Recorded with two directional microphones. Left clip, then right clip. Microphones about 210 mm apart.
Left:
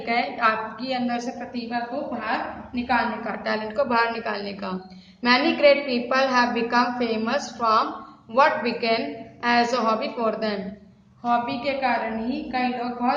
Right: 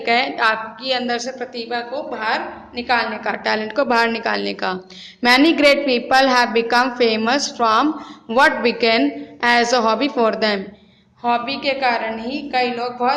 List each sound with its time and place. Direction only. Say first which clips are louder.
0.0 s a woman's voice: right 5 dB; 40° right (ahead or behind)